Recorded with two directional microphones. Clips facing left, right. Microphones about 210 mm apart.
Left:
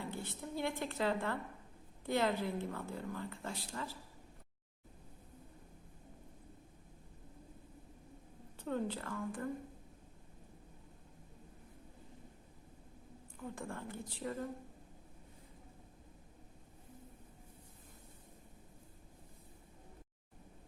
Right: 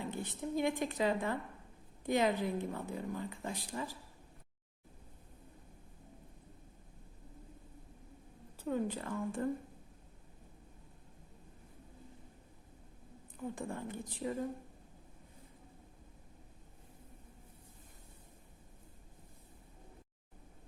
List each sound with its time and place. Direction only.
0.0 s a woman's voice: 15° right (ahead or behind)
8.5 s a woman's voice: 10° right (ahead or behind); by 9.5 s 25° right (ahead or behind)
13.3 s a woman's voice: 20° right (ahead or behind)